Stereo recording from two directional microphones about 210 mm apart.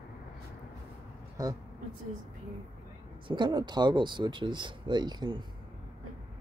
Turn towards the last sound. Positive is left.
turn(degrees=-20)  # may be behind; listen again after turning